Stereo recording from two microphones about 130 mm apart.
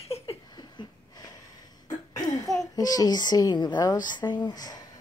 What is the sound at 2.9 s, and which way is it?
A woman's voice, 30° left (ahead or behind).